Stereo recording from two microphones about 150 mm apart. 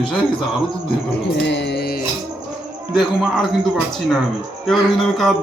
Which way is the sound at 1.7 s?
90° left.